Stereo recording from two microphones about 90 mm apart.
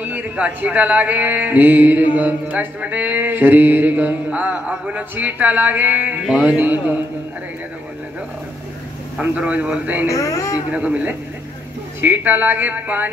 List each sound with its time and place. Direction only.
0.0 s speech: 15° right (ahead or behind)
2.5 s mantra: 15° right (ahead or behind)
9.2 s speech: 15° right (ahead or behind)
10.0 s a man's voice: 35° left (ahead or behind)
10.7 s speech: 15° right (ahead or behind)
12.0 s mantra: 20° right (ahead or behind)